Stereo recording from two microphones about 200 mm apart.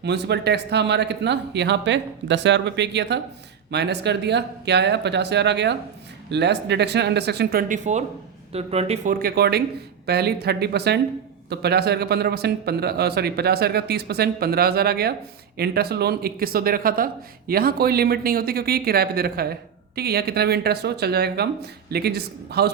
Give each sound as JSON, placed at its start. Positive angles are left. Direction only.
{"t": 0.0, "sound": "speech", "side_deg": -55}
{"t": 7.7, "sound": "speech", "side_deg": -35}